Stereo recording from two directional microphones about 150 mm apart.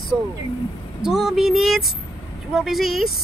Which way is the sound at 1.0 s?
5° right (ahead or behind).